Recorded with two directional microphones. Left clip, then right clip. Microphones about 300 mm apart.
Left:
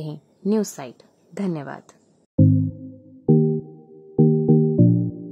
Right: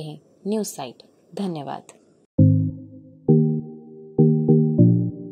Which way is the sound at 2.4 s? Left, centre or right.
Centre.